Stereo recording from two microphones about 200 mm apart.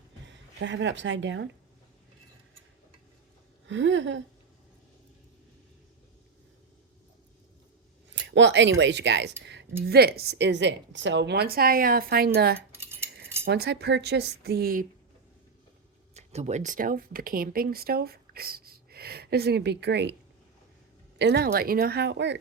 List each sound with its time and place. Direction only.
0.3 s a woman's voice: 65° right (ahead or behind)
3.7 s speech: 65° right (ahead or behind)
8.1 s speech: 65° right (ahead or behind)
9.4 s a sound: 60° right (ahead or behind)
9.8 s a woman's voice: 50° right (ahead or behind)
12.7 s cutlery: 10° right (ahead or behind)
13.4 s speech: 60° right (ahead or behind)
16.1 s speech: 35° right (ahead or behind); by 20.1 s 60° right (ahead or behind)
21.2 s speech: 55° right (ahead or behind)